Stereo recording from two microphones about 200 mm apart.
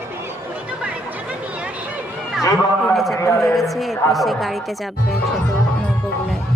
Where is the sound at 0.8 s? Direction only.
5° right (ahead or behind).